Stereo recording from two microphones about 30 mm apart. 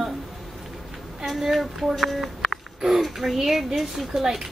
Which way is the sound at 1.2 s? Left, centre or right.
Centre.